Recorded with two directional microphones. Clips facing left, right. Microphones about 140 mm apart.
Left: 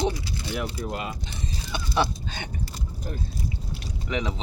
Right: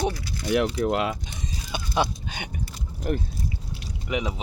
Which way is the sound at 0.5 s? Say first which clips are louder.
Right 9 dB; 80° right.